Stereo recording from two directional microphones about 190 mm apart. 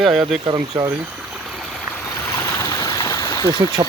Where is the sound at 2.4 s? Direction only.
15° left (ahead or behind).